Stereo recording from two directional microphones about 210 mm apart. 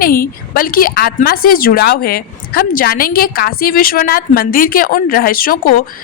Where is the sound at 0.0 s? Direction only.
45° left (ahead or behind).